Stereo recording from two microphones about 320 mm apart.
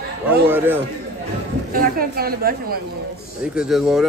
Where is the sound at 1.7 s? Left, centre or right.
Right.